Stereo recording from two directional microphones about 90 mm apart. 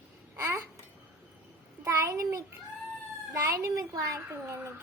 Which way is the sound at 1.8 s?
30° right (ahead or behind).